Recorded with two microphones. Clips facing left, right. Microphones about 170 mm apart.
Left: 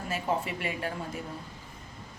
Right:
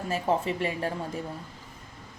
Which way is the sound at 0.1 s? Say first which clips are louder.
Right 4 dB; 35° right (ahead or behind).